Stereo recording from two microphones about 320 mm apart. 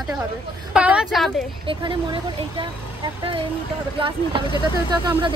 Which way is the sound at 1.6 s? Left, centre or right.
Centre.